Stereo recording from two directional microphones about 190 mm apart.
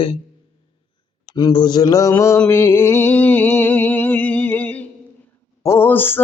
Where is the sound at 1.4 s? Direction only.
25° left (ahead or behind).